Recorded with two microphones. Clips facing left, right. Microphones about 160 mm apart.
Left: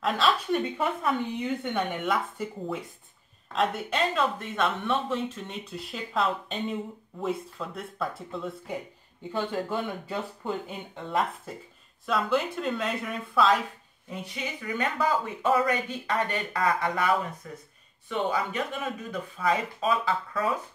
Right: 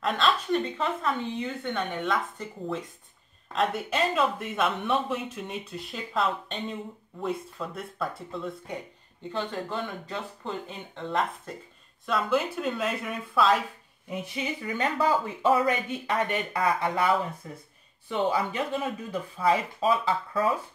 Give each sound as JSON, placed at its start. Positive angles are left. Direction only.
{"t": 0.0, "sound": "speech", "side_deg": 0}
{"t": 14.3, "sound": "speech", "side_deg": -25}